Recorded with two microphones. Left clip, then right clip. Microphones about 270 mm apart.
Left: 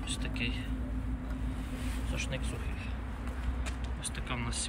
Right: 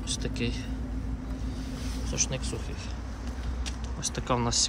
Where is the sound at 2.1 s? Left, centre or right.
Centre.